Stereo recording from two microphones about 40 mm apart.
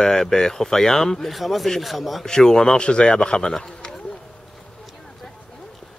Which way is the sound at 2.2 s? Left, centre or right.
Centre.